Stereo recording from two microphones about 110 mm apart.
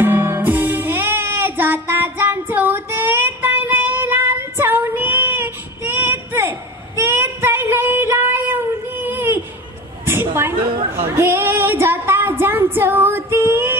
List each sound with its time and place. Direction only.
0.0 s music: 20° right (ahead or behind)
7.0 s child singing: 20° right (ahead or behind)
10.0 s a sound: 20° right (ahead or behind)